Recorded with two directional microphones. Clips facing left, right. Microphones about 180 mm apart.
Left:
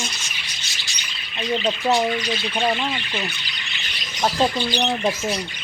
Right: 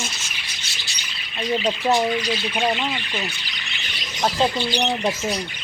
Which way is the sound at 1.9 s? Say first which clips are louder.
Right 1 dB; 10° right (ahead or behind).